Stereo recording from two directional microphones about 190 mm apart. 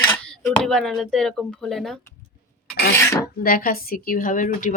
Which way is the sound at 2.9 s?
15° left (ahead or behind).